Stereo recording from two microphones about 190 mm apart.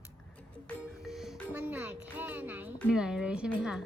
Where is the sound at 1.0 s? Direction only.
Centre (ahead or behind).